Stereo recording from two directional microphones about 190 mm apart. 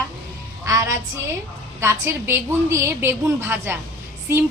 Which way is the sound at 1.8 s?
15° right (ahead or behind).